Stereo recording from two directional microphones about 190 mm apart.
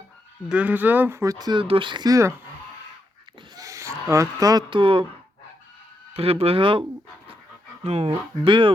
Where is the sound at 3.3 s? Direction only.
20° right (ahead or behind).